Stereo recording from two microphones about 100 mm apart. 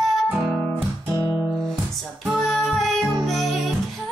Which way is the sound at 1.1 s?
45° left (ahead or behind).